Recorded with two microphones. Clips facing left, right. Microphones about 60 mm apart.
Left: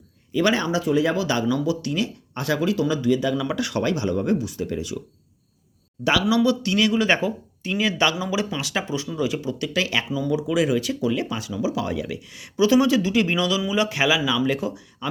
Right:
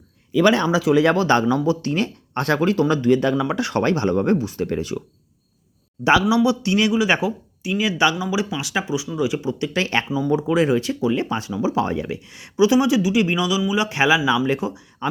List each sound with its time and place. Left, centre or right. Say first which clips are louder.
0.8 s speech: right 4 dB; right
1.1 s speech: right 5 dB; right
3.3 s speech: right 3 dB; right
6.2 s speech: right 2 dB; centre
6.9 s speech: right 1 dB; centre; by 9.6 s right
9.7 s speech: right 2 dB; right
10.1 s speech: right 3 dB; right
10.3 s speech: right 3 dB; right